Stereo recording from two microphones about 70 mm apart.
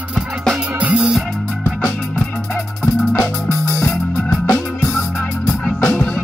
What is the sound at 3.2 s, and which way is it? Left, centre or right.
Music, left.